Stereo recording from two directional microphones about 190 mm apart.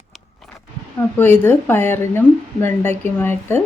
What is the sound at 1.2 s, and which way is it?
Speech, 10° left (ahead or behind).